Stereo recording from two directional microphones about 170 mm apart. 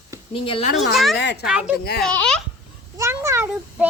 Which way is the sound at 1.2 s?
90° left.